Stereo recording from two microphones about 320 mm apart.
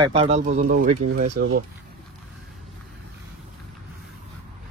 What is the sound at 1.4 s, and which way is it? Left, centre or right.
Speech, right.